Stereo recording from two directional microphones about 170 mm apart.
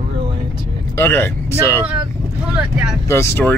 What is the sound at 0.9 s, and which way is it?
Speech, 10° left (ahead or behind).